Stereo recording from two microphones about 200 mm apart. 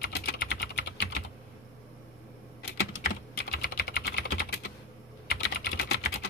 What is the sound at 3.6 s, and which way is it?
Typing, 50° left (ahead or behind).